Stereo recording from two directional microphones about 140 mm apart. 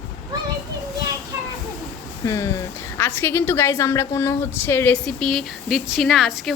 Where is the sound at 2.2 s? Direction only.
20° left (ahead or behind).